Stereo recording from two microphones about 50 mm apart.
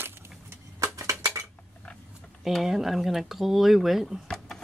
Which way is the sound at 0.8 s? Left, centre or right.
Right.